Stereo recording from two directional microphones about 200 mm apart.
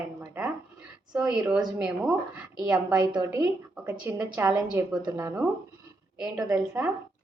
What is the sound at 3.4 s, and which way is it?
A woman's voice, 10° right (ahead or behind).